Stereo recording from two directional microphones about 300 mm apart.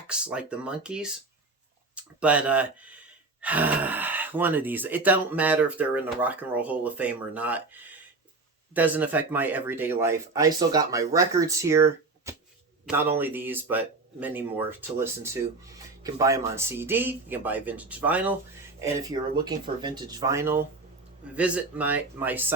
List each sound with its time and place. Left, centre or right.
0.1 s speech: centre